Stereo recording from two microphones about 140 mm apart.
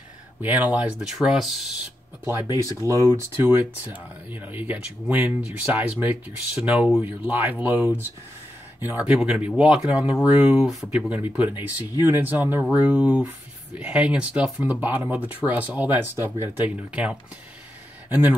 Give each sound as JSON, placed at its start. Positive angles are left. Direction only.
{"t": 0.4, "sound": "speech", "side_deg": -10}
{"t": 2.5, "sound": "speech", "side_deg": -20}